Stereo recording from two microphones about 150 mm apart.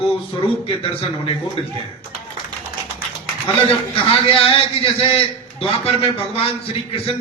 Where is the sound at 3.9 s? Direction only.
40° left (ahead or behind).